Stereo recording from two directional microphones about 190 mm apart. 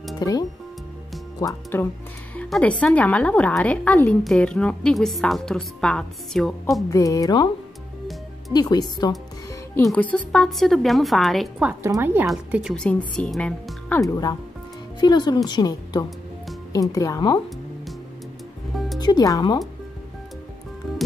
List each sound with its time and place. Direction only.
0.2 s a woman's voice: 20° left (ahead or behind); by 6.8 s 5° left (ahead or behind)
6.9 s a woman's voice: 20° left (ahead or behind)
8.5 s a woman's voice: 20° left (ahead or behind)
9.8 s speech: 5° left (ahead or behind)
11.8 s speech: 15° right (ahead or behind)
12.7 s a woman's voice: 5° left (ahead or behind)
18.9 s a woman's voice: 20° left (ahead or behind)